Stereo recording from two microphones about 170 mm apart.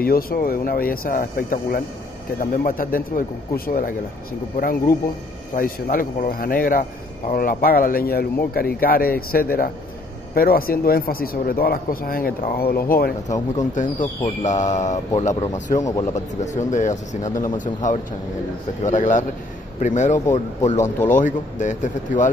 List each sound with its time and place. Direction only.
0.0 s speech: 60° left (ahead or behind)
13.6 s speech: 45° left (ahead or behind)
15.8 s speech: 20° left (ahead or behind)
16.3 s speech: 45° left (ahead or behind)